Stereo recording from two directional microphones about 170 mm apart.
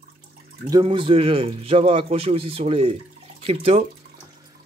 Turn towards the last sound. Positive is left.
turn(degrees=-35)  # may be behind; listen again after turning